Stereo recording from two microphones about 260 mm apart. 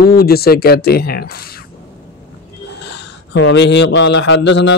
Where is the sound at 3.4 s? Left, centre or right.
Left.